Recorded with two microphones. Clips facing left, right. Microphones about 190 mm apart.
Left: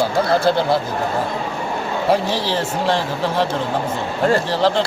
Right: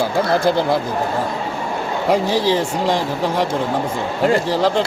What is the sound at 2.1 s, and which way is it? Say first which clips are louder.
A man's voice: right 4 dB; 15° right (ahead or behind).